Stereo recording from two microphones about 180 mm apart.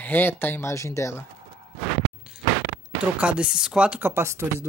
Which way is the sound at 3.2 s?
5° right (ahead or behind).